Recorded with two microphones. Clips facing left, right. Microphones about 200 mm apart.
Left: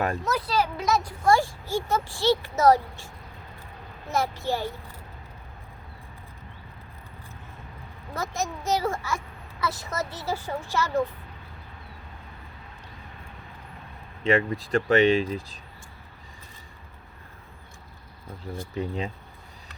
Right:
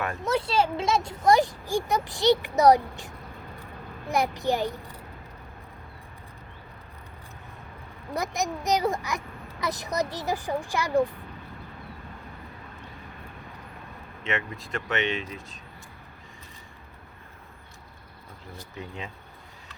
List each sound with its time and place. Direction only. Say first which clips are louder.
0.3 s speech: right 2 dB; 25° right (ahead or behind)
4.1 s speech: right 2 dB; 15° right (ahead or behind)
8.1 s speech: right 2 dB; 15° right (ahead or behind)
14.3 s speech: left 9 dB; 35° left (ahead or behind)
18.8 s speech: left 8 dB; 35° left (ahead or behind)